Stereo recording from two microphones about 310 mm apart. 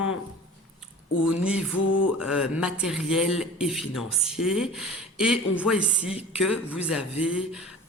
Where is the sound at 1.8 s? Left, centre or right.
Left.